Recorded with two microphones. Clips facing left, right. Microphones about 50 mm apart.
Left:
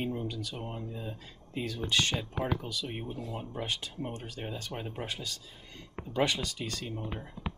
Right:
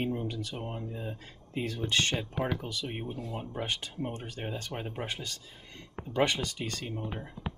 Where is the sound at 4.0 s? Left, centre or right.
Centre.